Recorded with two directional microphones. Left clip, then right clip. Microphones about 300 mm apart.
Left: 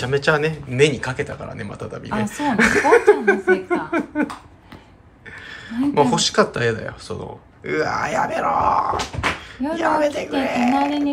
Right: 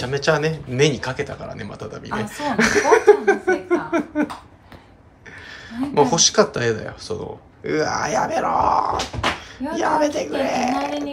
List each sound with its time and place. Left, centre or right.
0.0 s speech: centre
2.1 s a sound: centre
5.7 s speech: centre